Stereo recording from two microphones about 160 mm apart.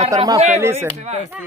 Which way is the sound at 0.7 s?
45° right (ahead or behind).